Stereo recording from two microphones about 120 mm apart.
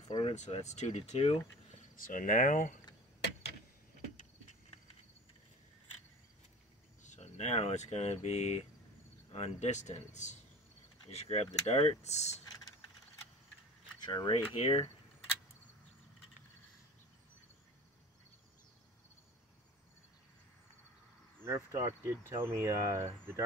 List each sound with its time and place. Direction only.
0.3 s speech: 70° left (ahead or behind); by 2.8 s 90° left
7.0 s speech: 75° left (ahead or behind)
11.1 s speech: 60° left (ahead or behind)
14.0 s speech: 40° left (ahead or behind)
21.4 s speech: 25° right (ahead or behind)